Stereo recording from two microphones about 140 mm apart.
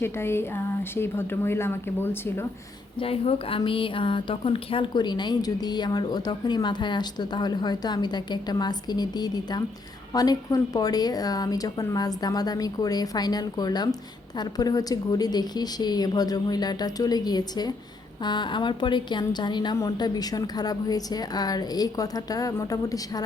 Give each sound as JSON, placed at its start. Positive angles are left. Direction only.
{"t": 0.0, "sound": "a woman's voice", "side_deg": 15}
{"t": 3.0, "sound": "a woman's voice", "side_deg": 40}